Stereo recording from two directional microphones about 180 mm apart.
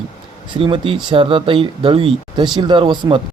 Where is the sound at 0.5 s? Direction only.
30° right (ahead or behind).